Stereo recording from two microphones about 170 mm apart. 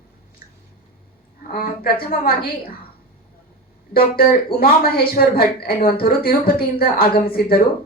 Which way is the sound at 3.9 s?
60° left (ahead or behind).